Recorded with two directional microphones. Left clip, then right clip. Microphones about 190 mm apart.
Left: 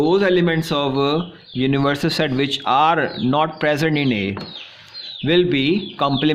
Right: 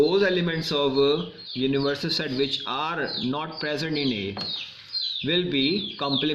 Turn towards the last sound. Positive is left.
turn(degrees=55)  # may be behind; listen again after turning